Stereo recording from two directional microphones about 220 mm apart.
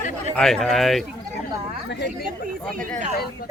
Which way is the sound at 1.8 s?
55° left (ahead or behind).